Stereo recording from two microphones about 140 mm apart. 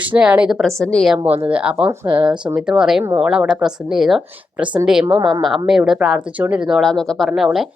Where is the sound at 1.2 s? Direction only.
45° right (ahead or behind).